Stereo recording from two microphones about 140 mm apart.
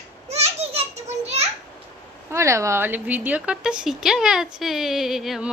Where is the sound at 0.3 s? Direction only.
50° right (ahead or behind).